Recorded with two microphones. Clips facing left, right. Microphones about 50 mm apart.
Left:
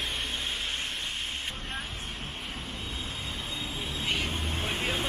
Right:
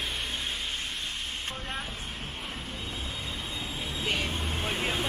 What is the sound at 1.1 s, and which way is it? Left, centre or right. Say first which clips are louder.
Vehicle: left 1 dB; left.